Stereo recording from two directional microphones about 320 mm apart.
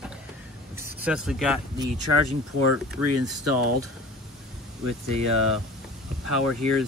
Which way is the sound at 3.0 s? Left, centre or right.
Right.